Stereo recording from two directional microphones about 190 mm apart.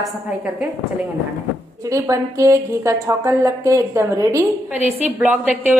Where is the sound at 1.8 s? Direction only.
15° right (ahead or behind).